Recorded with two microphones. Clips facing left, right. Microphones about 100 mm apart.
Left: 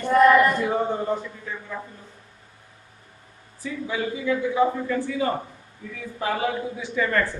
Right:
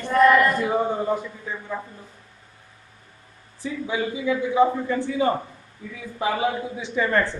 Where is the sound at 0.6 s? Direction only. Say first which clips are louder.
Right 1 dB; 10° right (ahead or behind).